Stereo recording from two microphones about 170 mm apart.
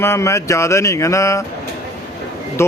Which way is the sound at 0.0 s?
15° left (ahead or behind).